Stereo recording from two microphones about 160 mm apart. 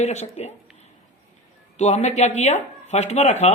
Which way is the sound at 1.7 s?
45° left (ahead or behind).